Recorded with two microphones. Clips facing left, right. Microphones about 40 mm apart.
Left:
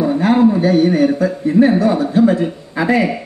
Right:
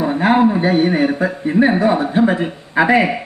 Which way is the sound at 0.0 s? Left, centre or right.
Right.